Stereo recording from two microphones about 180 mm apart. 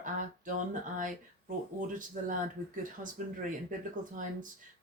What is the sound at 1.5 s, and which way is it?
Speech, 45° right (ahead or behind).